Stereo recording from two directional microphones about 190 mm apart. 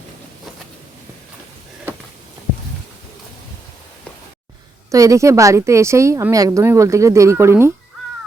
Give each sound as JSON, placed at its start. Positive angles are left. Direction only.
{"t": 4.9, "sound": "a woman's voice", "side_deg": -15}